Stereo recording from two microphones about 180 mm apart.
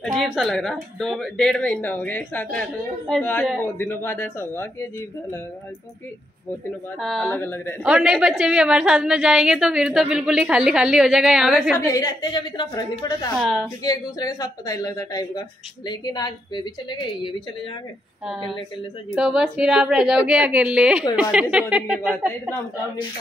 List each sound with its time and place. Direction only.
0.0 s a woman's voice: centre (ahead or behind)
7.0 s speech: centre (ahead or behind)
7.8 s a woman's voice: 5° right (ahead or behind)
11.8 s speech: 20° left (ahead or behind)
13.4 s a woman's voice: centre (ahead or behind)
13.8 s speech: 20° left (ahead or behind)
18.2 s a woman's voice: centre (ahead or behind)